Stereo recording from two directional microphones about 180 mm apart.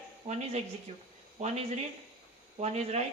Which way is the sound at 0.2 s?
30° right (ahead or behind).